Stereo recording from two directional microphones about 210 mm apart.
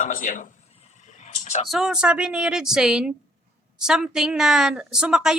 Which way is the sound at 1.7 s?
Centre (ahead or behind).